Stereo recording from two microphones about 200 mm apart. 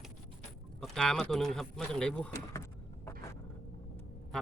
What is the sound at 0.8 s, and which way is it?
Speech, centre (ahead or behind).